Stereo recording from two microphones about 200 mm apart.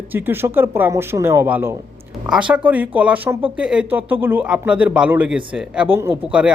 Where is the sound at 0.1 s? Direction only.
10° right (ahead or behind).